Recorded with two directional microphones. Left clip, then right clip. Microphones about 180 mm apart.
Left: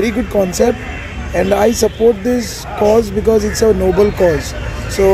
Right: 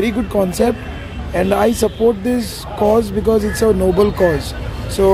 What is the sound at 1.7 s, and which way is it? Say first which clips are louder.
Speech: left 3 dB; 30° right (ahead or behind).